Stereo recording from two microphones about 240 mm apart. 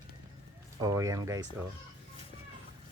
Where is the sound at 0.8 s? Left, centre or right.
Centre.